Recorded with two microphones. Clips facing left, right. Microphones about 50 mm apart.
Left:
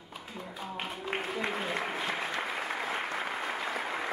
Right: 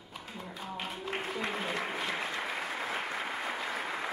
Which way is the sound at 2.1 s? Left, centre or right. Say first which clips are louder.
Left 1 dB; centre.